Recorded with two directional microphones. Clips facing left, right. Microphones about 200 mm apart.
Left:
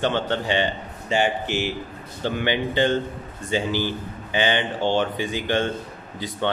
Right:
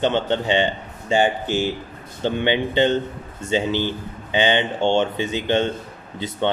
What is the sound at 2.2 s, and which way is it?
A man's voice, 25° right (ahead or behind).